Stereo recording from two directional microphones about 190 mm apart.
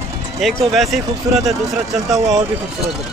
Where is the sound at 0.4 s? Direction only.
Centre (ahead or behind).